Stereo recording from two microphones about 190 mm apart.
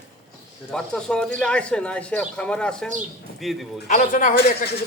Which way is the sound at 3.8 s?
40° left (ahead or behind).